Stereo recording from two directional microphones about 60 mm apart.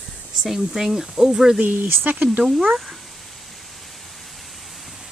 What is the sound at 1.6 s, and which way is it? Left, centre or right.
Speech, right.